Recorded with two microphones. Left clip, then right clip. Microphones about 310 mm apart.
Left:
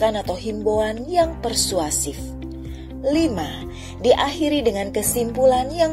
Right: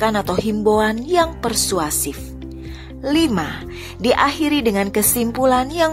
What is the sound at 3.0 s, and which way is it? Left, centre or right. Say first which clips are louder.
Speech: right 2 dB; right.